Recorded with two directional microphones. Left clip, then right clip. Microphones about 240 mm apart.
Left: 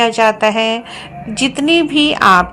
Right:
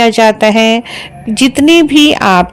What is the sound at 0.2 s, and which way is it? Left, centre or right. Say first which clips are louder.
A woman's voice: right 5 dB; right.